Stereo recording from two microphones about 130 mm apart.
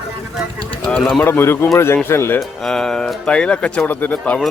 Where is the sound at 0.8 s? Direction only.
5° left (ahead or behind).